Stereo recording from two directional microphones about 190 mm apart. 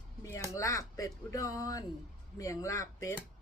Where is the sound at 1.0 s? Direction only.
15° left (ahead or behind).